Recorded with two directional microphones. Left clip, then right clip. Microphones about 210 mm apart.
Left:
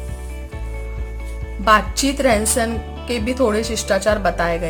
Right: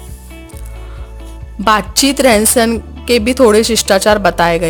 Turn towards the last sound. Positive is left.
turn(degrees=-45)  # may be behind; listen again after turning